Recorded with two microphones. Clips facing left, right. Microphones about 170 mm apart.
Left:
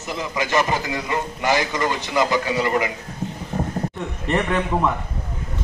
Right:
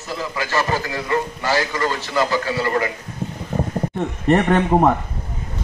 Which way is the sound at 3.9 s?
45° right (ahead or behind).